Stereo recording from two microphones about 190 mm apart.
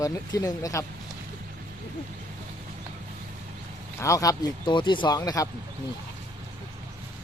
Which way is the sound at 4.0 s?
15° left (ahead or behind).